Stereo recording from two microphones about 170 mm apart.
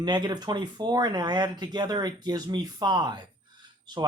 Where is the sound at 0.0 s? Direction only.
25° right (ahead or behind).